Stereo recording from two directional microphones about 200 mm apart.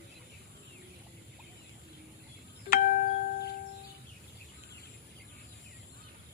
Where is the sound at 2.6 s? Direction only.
45° left (ahead or behind).